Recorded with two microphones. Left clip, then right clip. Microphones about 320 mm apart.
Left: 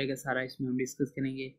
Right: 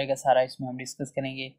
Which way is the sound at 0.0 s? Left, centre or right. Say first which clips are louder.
Right 10 dB; right.